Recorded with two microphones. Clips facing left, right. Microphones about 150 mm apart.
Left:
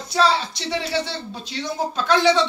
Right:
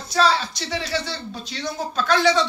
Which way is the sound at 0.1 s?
25° left (ahead or behind).